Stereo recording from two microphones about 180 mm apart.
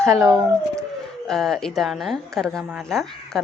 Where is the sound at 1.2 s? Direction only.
Centre (ahead or behind).